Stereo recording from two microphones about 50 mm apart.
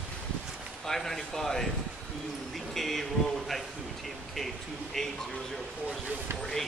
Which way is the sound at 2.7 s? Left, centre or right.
Centre.